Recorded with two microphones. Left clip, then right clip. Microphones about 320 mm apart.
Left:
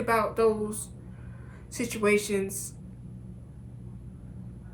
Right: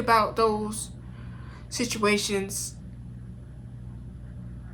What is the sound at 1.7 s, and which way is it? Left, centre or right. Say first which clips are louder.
Speech: right 1 dB; centre.